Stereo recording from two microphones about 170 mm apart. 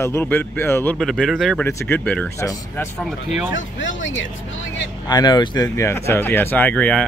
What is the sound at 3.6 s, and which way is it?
Speech, 90° left.